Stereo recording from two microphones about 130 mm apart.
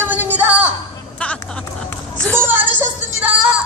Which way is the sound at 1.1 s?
10° left (ahead or behind).